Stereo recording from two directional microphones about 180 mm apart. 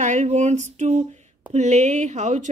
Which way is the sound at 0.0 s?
40° right (ahead or behind).